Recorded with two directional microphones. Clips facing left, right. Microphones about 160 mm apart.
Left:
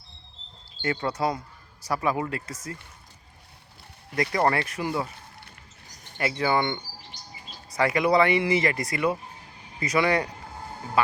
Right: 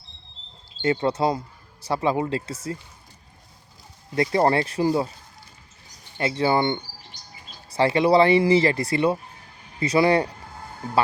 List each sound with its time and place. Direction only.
0.8 s speech: 25° right (ahead or behind)
4.1 s speech: 25° right (ahead or behind)
6.1 s speech: 25° right (ahead or behind)